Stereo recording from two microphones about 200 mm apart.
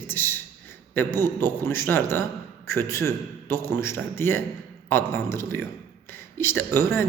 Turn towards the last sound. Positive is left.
turn(degrees=10)  # may be behind; listen again after turning